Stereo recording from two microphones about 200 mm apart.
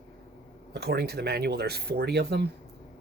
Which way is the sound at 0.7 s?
55° right (ahead or behind).